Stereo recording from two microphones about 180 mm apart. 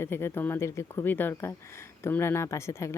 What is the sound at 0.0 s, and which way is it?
Speech, 15° left (ahead or behind).